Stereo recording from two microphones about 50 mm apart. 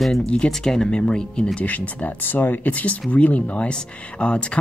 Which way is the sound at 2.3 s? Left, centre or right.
Left.